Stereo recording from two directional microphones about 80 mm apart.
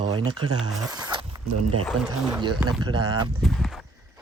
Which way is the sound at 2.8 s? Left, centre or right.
Right.